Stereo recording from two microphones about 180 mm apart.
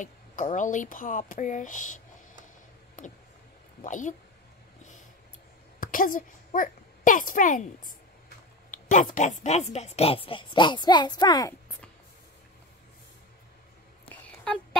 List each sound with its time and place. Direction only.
0.0 s speech: 45° left (ahead or behind)
3.0 s speech: 45° left (ahead or behind)
5.8 s a child's voice: 50° left (ahead or behind); by 11.5 s 20° left (ahead or behind)
14.0 s a sound: 5° left (ahead or behind)